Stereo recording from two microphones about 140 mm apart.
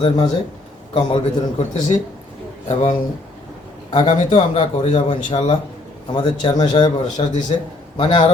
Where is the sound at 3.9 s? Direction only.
40° left (ahead or behind).